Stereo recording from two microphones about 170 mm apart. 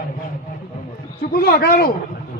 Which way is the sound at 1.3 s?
65° left (ahead or behind).